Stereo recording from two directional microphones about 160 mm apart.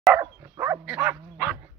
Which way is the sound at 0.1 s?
15° right (ahead or behind).